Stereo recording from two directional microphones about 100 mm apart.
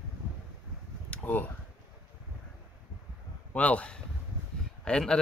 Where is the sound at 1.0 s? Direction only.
15° left (ahead or behind).